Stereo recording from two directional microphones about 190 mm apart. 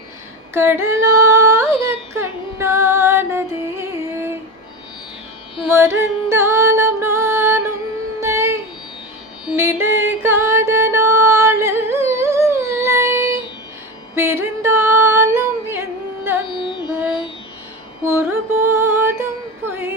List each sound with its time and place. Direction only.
0.5 s child singing: 10° right (ahead or behind)
1.3 s music: 15° right (ahead or behind)
5.6 s music: 15° right (ahead or behind)
14.2 s singing: 10° right (ahead or behind)
16.5 s carnatic music: 25° left (ahead or behind)
18.0 s music: 10° right (ahead or behind)